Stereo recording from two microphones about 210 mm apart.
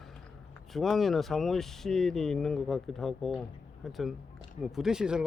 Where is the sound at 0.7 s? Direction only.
Centre (ahead or behind).